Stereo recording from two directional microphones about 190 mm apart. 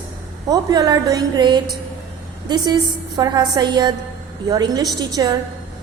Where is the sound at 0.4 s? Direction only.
20° right (ahead or behind).